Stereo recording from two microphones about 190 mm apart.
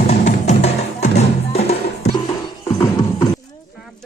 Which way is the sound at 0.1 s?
35° left (ahead or behind).